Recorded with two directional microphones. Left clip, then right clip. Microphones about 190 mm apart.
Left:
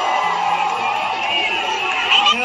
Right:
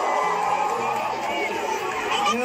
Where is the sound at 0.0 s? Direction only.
35° right (ahead or behind).